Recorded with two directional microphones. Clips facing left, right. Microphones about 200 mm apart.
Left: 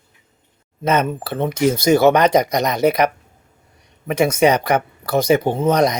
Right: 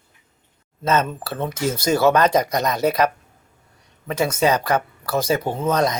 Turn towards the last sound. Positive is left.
turn(degrees=15)  # may be behind; listen again after turning